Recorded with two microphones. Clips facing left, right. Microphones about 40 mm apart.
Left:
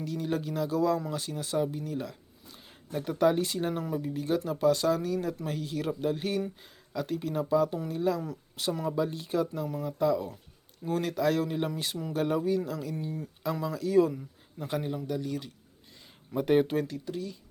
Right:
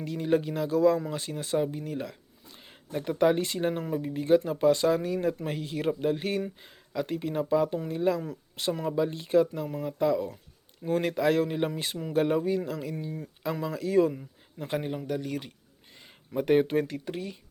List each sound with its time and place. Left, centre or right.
0.0 s speech: centre
0.7 s speech: centre; by 15.5 s right
16.3 s speech: centre
16.9 s speech: right